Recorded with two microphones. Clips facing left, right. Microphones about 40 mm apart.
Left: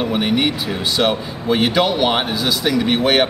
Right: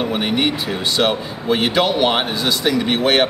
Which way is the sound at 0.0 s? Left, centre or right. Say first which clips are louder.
Left 1 dB; centre.